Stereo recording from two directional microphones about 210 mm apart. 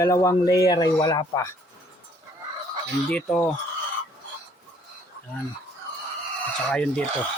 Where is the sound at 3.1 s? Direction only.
5° left (ahead or behind).